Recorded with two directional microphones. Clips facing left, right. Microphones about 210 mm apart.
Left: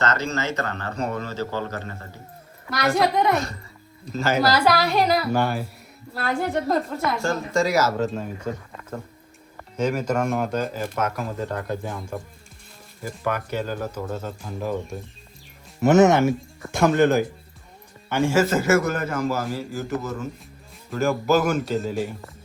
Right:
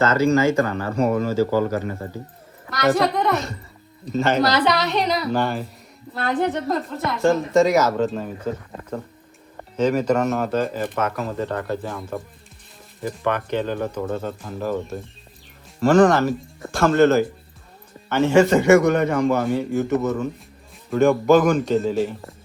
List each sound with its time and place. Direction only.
0.0 s a man's voice: 10° right (ahead or behind)
9.7 s a man's voice: 10° left (ahead or behind)
15.8 s a man's voice: 20° left (ahead or behind)